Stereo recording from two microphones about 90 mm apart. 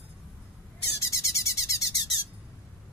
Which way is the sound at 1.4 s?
35° left (ahead or behind).